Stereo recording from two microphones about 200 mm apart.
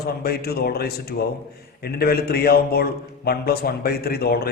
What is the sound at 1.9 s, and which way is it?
A man's voice, 50° left (ahead or behind).